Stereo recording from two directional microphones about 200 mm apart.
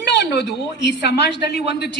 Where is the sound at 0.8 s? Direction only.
60° left (ahead or behind).